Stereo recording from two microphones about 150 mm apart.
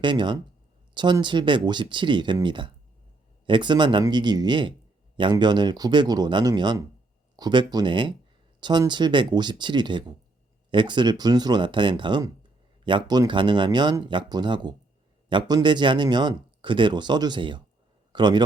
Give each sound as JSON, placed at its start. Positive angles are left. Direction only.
{"t": 0.0, "sound": "a man's voice", "side_deg": -30}